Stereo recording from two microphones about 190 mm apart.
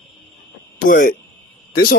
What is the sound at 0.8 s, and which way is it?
Speech, 45° left (ahead or behind).